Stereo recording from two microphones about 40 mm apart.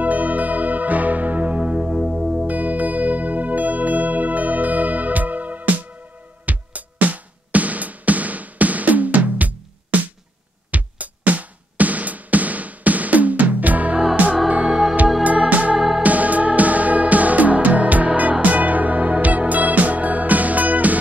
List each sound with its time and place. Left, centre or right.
0.0 s music: right
1.9 s music: centre
2.4 s music: right
14.6 s music: centre
15.5 s music: right